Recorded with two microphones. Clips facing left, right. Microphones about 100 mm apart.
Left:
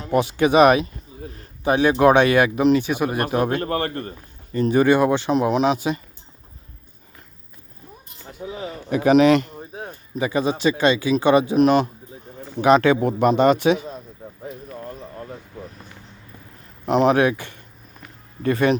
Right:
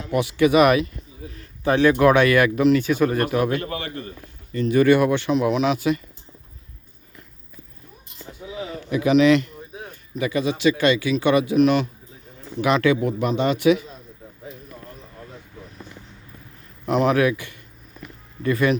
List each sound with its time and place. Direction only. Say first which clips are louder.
0.0 s speech: even; 35° left (ahead or behind)
1.2 s a sound: left 3 dB; 50° left (ahead or behind)
1.6 s speech: even; 20° left (ahead or behind)
3.2 s speech: left 1 dB; 30° left (ahead or behind)
3.7 s speech: left 6 dB; 45° left (ahead or behind)
4.5 s speech: even; 35° left (ahead or behind)
5.3 s speech: left 1 dB; 35° left (ahead or behind)
8.5 s speech: left 1 dB; 40° left (ahead or behind)
16.8 s speech: left 2 dB; 30° left (ahead or behind)